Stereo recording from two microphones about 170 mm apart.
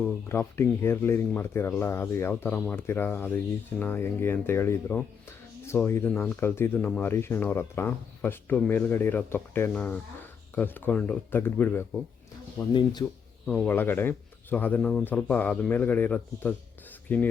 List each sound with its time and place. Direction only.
0.3 s speech: 15° left (ahead or behind)
12.7 s speech: 25° left (ahead or behind)
13.4 s speech: 5° left (ahead or behind)